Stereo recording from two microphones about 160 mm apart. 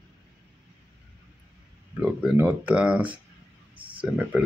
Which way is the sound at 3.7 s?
30° right (ahead or behind).